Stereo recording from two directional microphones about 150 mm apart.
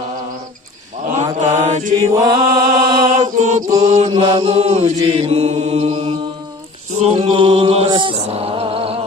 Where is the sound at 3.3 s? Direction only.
55° right (ahead or behind).